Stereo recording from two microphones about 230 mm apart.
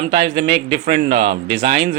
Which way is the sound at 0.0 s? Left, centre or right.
Right.